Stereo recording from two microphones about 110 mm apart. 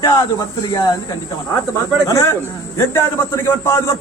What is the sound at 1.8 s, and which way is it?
A man's voice, 25° left (ahead or behind).